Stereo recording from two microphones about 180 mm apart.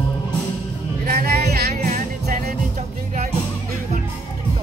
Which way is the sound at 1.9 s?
45° right (ahead or behind).